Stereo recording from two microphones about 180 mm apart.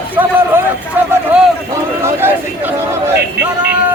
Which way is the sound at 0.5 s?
10° right (ahead or behind).